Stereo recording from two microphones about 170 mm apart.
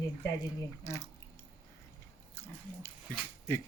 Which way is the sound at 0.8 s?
20° left (ahead or behind).